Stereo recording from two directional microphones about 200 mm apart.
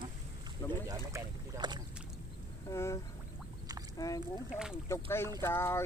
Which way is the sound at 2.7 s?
15° left (ahead or behind).